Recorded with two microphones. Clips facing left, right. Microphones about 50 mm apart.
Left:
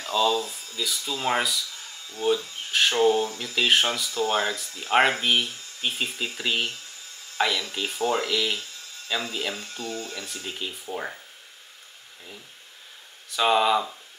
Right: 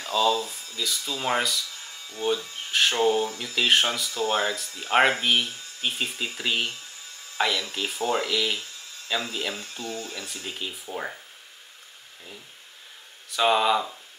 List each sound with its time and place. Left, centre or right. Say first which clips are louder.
0.1 s speech: even; centre
13.3 s speech: even; centre